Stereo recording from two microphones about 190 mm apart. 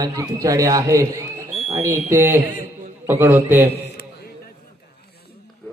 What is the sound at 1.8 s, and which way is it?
A man's voice, 15° right (ahead or behind).